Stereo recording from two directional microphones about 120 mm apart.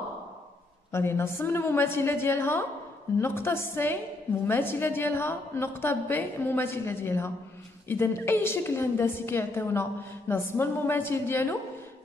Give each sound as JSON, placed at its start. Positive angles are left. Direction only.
{"t": 0.9, "sound": "a woman's voice", "side_deg": 20}